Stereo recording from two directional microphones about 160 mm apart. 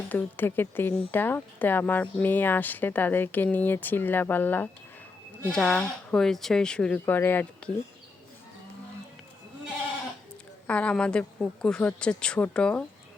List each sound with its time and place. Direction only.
0.1 s speech: 10° left (ahead or behind)
10.7 s speech: 10° left (ahead or behind)